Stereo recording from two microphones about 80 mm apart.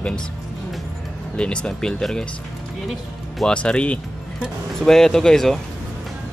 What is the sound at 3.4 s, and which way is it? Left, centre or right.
Speech, centre.